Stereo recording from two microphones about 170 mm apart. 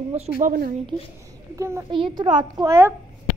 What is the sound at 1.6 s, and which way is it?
Speech, 15° right (ahead or behind).